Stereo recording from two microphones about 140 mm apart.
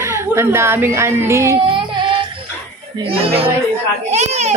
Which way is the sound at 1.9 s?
35° right (ahead or behind).